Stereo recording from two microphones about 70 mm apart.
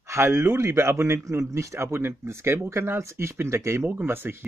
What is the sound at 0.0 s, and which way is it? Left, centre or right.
A man's voice, right.